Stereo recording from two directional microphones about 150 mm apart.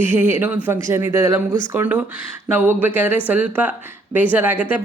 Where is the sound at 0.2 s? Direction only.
15° right (ahead or behind).